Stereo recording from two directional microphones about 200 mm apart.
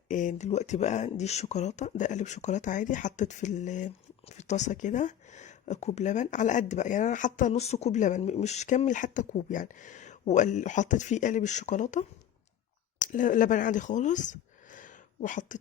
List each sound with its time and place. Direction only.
0.1 s speech: 40° left (ahead or behind)